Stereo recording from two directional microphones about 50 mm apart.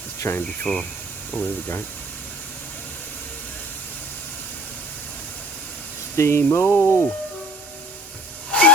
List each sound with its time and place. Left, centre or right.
0.2 s speech: left
0.6 s speech: centre
1.4 s speech: left
6.1 s speech: left
6.5 s speech: left
8.4 s hiss: left